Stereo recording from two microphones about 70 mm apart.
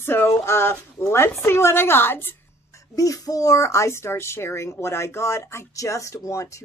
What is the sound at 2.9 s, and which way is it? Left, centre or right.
Speech, left.